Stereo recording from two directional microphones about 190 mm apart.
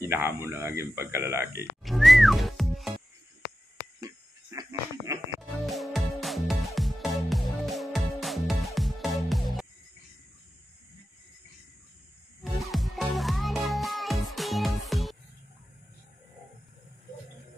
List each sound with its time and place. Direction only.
0.0 s speech: 15° right (ahead or behind)
1.8 s whistling: centre (ahead or behind)
4.5 s a sound: 20° right (ahead or behind)
5.7 s music: centre (ahead or behind)
12.4 s music: centre (ahead or behind)